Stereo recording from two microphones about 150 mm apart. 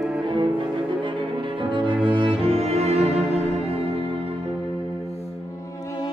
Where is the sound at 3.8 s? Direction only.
40° right (ahead or behind).